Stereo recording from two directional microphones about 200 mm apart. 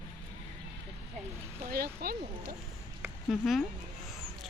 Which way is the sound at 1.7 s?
50° right (ahead or behind).